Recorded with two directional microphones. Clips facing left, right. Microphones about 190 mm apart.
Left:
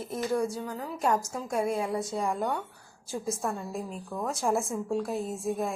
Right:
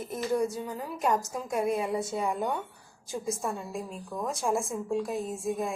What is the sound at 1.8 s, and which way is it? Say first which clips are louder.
Speech: even; 20° right (ahead or behind).